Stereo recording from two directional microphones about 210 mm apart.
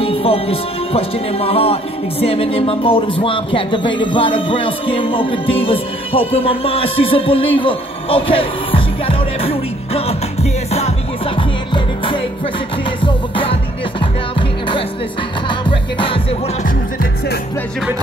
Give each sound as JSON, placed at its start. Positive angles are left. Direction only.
{"t": 0.0, "sound": "speech", "side_deg": 25}
{"t": 13.0, "sound": "music", "side_deg": 25}
{"t": 16.6, "sound": "music", "side_deg": 45}